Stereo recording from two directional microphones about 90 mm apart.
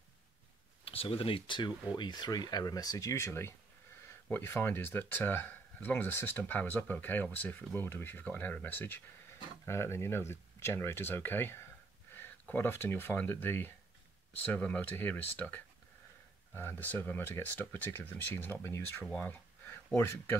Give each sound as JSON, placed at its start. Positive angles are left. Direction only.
{"t": 0.8, "sound": "speech", "side_deg": 90}
{"t": 1.6, "sound": "speech", "side_deg": 55}
{"t": 19.0, "sound": "speech", "side_deg": 15}
{"t": 19.9, "sound": "speech", "side_deg": 30}